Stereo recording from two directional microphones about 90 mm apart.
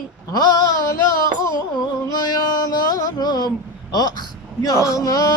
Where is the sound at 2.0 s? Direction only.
45° left (ahead or behind).